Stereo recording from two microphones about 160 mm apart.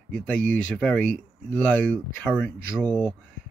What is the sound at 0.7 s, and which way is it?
Speech, 10° left (ahead or behind).